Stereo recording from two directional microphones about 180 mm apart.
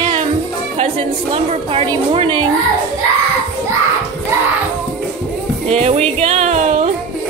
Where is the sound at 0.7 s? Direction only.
35° right (ahead or behind).